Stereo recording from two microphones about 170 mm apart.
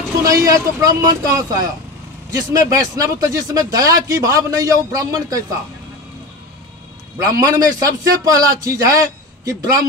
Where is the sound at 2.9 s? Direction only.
20° right (ahead or behind).